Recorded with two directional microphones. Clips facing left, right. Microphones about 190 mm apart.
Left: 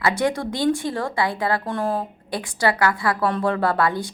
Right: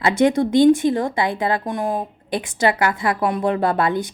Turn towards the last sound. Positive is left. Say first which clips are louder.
# right 2 dB
turn(degrees=-20)  # may be behind; listen again after turning